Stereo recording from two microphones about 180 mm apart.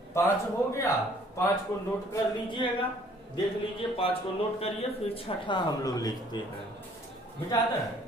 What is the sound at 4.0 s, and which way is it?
Speech, 30° left (ahead or behind).